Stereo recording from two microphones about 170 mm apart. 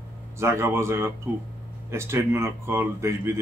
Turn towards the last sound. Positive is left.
turn(degrees=-15)  # may be behind; listen again after turning